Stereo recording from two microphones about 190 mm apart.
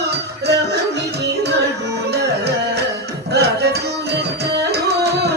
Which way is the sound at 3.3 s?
60° right (ahead or behind).